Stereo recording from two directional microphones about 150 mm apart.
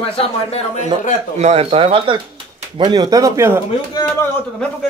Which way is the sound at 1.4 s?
40° right (ahead or behind).